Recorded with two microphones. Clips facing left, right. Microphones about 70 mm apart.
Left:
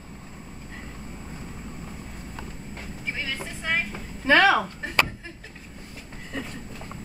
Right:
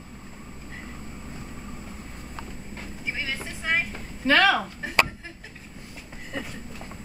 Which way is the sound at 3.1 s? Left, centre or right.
Centre.